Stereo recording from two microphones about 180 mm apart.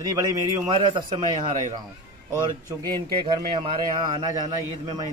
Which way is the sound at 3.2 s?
30° right (ahead or behind).